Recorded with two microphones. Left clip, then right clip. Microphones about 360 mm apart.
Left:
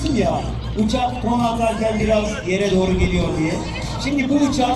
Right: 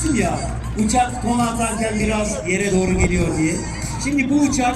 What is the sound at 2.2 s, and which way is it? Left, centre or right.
Speech, centre.